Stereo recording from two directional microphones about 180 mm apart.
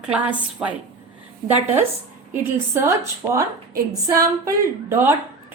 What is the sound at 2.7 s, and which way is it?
A woman's voice, 15° right (ahead or behind).